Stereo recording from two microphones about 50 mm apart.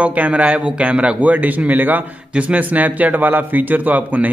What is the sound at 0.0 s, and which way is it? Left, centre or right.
A man's voice, right.